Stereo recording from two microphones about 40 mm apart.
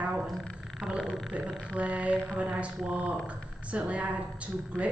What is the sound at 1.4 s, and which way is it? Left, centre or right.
A woman's voice, right.